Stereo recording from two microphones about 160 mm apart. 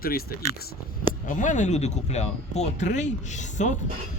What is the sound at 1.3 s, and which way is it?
Speech, 50° left (ahead or behind).